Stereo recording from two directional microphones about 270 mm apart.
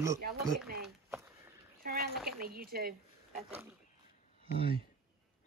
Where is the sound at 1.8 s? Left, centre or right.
Right.